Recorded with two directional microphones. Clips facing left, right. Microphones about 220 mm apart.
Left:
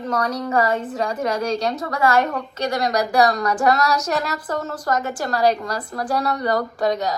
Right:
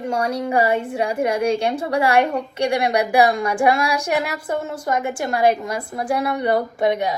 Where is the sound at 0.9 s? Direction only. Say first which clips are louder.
Right 2 dB; 30° right (ahead or behind).